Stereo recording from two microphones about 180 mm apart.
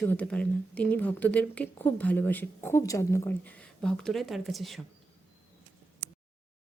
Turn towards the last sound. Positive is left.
turn(degrees=0)  # may be behind; listen again after turning